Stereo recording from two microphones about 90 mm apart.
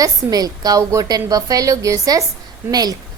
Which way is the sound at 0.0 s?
45° right (ahead or behind).